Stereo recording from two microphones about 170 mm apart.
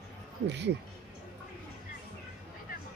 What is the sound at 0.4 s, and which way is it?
Speech, 90° right.